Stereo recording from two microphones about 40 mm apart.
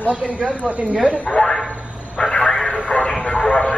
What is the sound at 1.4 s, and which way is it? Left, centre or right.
Speech, centre.